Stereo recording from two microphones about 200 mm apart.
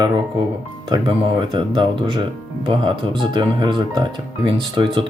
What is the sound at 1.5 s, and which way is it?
Speech, 25° right (ahead or behind).